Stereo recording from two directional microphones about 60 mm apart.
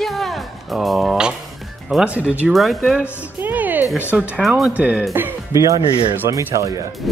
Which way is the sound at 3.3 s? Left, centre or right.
Right.